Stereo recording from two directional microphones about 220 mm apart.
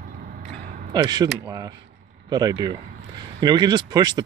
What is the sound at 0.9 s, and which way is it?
Speech, 20° right (ahead or behind).